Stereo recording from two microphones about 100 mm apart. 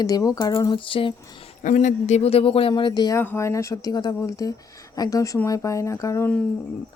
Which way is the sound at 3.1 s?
25° left (ahead or behind).